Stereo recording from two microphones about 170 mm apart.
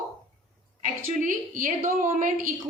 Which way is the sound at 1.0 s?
55° right (ahead or behind).